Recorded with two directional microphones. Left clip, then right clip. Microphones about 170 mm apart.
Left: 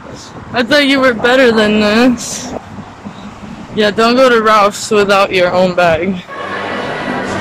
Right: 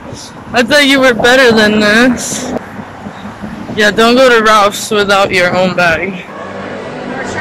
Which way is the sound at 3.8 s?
5° left (ahead or behind).